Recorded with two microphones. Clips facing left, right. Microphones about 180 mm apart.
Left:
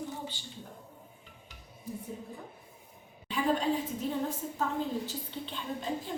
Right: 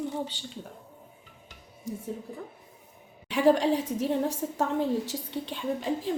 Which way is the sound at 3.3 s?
75° right (ahead or behind).